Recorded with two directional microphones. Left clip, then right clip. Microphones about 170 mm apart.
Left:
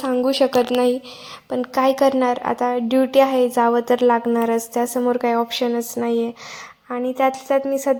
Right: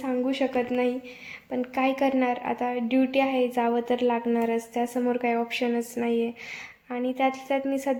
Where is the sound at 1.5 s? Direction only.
25° left (ahead or behind).